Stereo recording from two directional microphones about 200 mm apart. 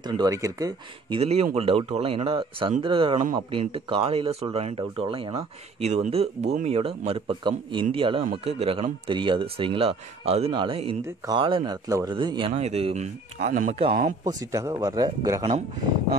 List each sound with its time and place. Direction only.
0.0 s speech: 20° right (ahead or behind)
1.2 s speech: 30° right (ahead or behind)
14.2 s speech: 15° right (ahead or behind)